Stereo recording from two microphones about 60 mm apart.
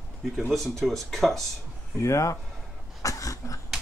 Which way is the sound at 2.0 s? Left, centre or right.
Left.